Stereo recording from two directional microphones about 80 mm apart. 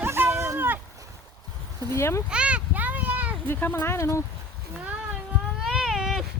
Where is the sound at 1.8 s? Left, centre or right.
Left.